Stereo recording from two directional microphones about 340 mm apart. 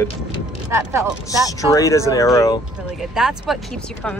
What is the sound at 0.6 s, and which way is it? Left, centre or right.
Speech, centre.